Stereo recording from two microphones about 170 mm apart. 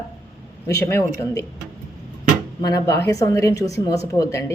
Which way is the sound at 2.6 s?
20° left (ahead or behind).